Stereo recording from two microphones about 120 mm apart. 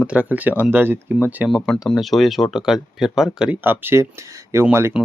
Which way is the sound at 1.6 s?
5° left (ahead or behind).